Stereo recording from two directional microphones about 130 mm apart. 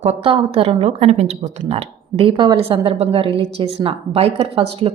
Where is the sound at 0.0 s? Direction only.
50° right (ahead or behind).